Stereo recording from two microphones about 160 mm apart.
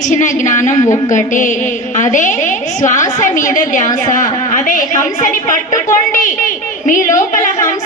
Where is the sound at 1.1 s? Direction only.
50° left (ahead or behind).